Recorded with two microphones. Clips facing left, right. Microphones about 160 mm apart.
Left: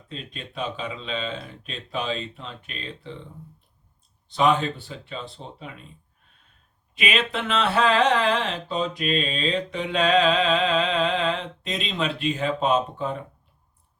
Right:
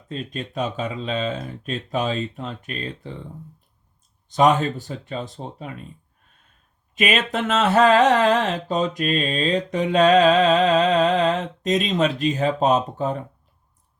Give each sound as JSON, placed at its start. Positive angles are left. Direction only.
{"t": 0.1, "sound": "speech", "side_deg": -45}
{"t": 4.3, "sound": "speech", "side_deg": -45}
{"t": 6.9, "sound": "speech", "side_deg": -45}